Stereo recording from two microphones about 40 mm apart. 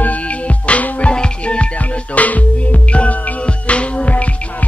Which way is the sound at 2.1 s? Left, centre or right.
Left.